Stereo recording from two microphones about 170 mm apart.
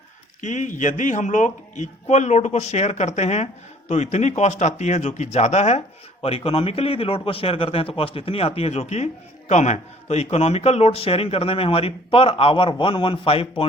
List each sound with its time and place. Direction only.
0.4 s a man's voice: 45° left (ahead or behind)